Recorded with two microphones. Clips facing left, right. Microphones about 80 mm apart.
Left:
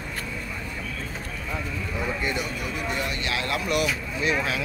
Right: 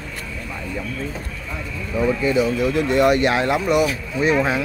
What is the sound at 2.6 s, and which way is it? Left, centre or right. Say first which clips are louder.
Speech: right 12 dB; right.